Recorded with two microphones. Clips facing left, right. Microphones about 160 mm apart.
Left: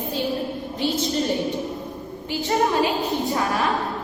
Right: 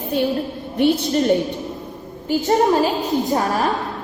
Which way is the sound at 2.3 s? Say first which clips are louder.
Right 6 dB; 40° right (ahead or behind).